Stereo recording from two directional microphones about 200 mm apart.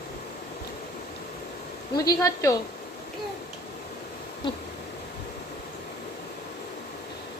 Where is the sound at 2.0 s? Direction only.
15° left (ahead or behind).